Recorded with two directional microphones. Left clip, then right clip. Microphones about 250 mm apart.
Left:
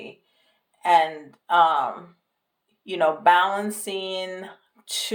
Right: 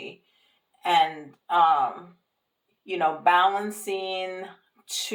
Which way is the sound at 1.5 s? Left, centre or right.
Left.